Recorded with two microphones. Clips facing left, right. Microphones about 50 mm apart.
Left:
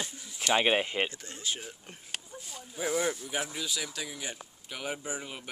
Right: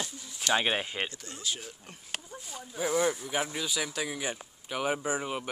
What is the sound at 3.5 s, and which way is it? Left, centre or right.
Speech, centre.